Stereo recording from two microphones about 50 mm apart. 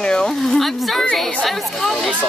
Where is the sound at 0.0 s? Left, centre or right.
Centre.